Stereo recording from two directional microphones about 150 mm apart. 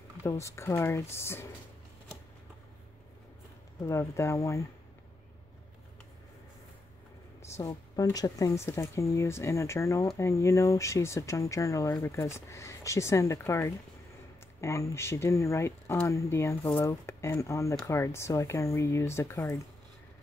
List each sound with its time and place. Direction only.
0.2 s speech: 20° left (ahead or behind)
3.8 s speech: 20° left (ahead or behind)
7.4 s speech: 20° left (ahead or behind)